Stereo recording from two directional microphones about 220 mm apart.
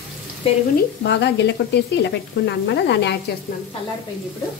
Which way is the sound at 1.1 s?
50° left (ahead or behind).